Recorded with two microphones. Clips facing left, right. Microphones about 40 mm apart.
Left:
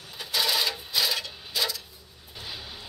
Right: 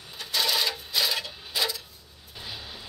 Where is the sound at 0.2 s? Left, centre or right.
Centre.